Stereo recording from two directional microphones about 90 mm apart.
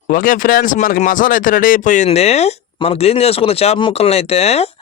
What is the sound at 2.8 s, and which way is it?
Speech, 90° left.